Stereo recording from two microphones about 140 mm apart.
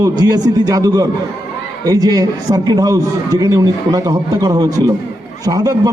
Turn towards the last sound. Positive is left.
turn(degrees=-25)  # may be behind; listen again after turning